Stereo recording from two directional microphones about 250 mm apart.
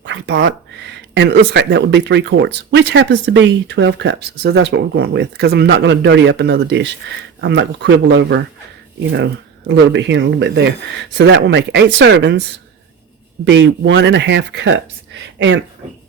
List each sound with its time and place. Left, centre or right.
0.0 s a sound: right
1.1 s speech: right
13.4 s speech: right